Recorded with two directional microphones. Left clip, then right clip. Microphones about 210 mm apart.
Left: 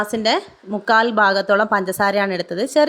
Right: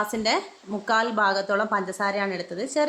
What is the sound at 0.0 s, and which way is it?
A woman's voice, 35° left (ahead or behind).